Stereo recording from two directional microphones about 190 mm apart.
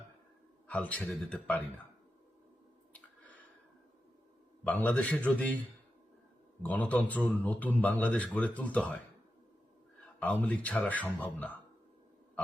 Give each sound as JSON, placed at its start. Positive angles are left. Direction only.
{"t": 0.7, "sound": "speech", "side_deg": 5}
{"t": 4.6, "sound": "speech", "side_deg": 5}
{"t": 6.6, "sound": "speech", "side_deg": 5}
{"t": 10.4, "sound": "speech", "side_deg": 5}